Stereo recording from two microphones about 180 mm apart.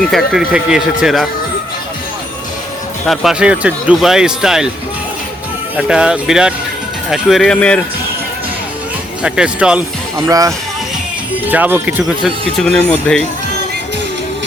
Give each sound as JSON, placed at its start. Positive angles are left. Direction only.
{"t": 0.1, "sound": "speech", "side_deg": 0}
{"t": 3.1, "sound": "speech", "side_deg": -5}
{"t": 5.7, "sound": "speech", "side_deg": -5}
{"t": 9.2, "sound": "speech", "side_deg": -5}
{"t": 10.2, "sound": "speech", "side_deg": -20}